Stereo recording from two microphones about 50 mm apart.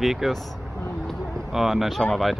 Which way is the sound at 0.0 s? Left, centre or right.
Centre.